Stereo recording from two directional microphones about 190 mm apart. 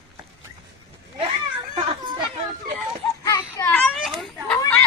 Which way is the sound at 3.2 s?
20° left (ahead or behind).